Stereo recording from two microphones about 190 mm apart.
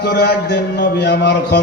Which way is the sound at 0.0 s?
60° left (ahead or behind).